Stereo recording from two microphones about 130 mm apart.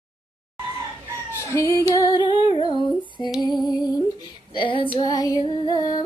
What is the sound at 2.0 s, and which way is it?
Humming, 30° left (ahead or behind).